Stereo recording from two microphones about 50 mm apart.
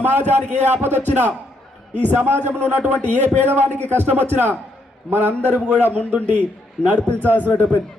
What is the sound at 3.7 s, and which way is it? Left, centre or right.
Speech, right.